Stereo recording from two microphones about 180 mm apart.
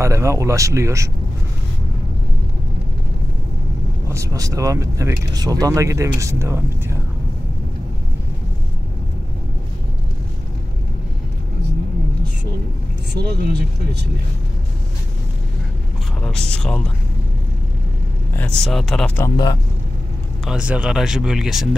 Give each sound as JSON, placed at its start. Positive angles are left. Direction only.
{"t": 0.0, "sound": "speech", "side_deg": -15}
{"t": 4.1, "sound": "speech", "side_deg": -20}
{"t": 13.1, "sound": "speech", "side_deg": -65}
{"t": 16.2, "sound": "music", "side_deg": 5}
{"t": 18.3, "sound": "speech", "side_deg": 5}
{"t": 19.3, "sound": "speech", "side_deg": 25}
{"t": 20.4, "sound": "speech", "side_deg": -5}